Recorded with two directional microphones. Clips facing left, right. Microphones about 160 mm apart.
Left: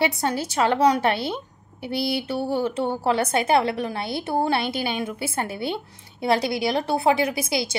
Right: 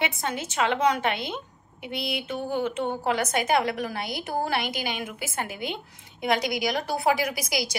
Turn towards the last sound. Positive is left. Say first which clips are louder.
# left 4 dB
turn(degrees=25)  # may be behind; listen again after turning